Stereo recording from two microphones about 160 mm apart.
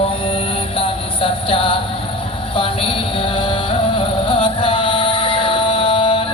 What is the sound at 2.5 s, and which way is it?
Music, 35° left (ahead or behind).